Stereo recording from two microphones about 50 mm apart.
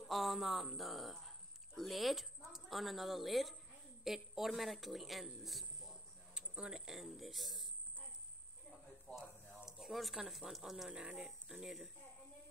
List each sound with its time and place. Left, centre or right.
0.0 s speech: centre
6.3 s speech: centre
9.1 s speech: left
9.7 s speech: centre
10.9 s speech: centre